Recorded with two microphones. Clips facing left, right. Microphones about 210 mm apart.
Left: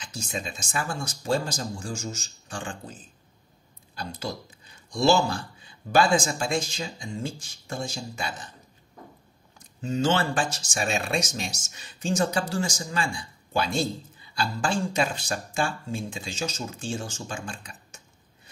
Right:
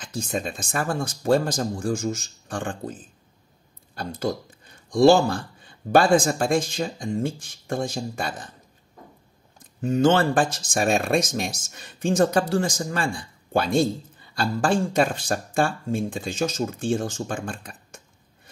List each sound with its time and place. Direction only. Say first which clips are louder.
0.0 s speech: right 6 dB; 55° right (ahead or behind)
9.6 s speech: right 6 dB; 55° right (ahead or behind)